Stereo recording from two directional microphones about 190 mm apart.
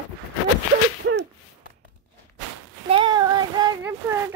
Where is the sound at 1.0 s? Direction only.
75° right (ahead or behind).